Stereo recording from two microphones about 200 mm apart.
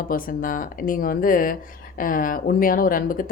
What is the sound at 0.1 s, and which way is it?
Speech, 45° left (ahead or behind).